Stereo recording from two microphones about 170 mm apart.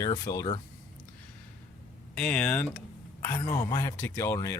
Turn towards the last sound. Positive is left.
turn(degrees=15)  # may be behind; listen again after turning